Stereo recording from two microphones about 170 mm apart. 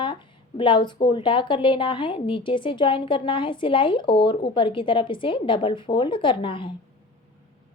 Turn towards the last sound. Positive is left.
turn(degrees=30)  # may be behind; listen again after turning